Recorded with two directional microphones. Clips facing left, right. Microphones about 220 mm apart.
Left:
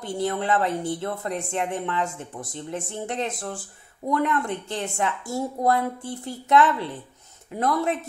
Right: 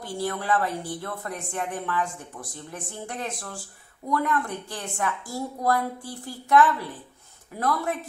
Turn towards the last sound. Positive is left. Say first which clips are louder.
# left 3 dB
turn(degrees=25)  # may be behind; listen again after turning